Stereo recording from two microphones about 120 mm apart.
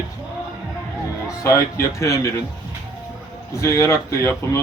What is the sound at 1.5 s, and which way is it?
Speech, 25° left (ahead or behind).